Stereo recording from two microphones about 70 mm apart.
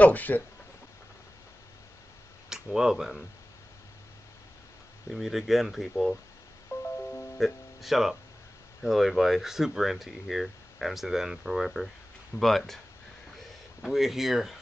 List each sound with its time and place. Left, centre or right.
0.0 s speech: left
2.5 s speech: centre
5.1 s speech: centre
7.0 s music: left
7.3 s speech: centre
13.8 s speech: centre